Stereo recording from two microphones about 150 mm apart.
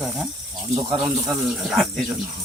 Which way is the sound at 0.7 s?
35° right (ahead or behind).